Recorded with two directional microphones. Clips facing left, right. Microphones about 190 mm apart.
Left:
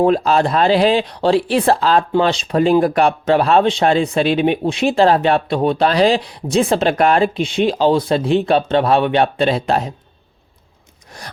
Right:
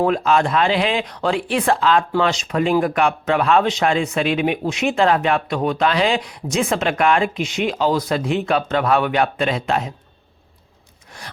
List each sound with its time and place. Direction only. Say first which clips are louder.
0.0 s speech: left 3 dB; 35° left (ahead or behind)
11.1 s rub: left 3 dB; 40° left (ahead or behind)